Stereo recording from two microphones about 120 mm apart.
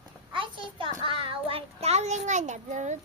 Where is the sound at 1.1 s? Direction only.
50° right (ahead or behind); by 2.9 s 75° right (ahead or behind).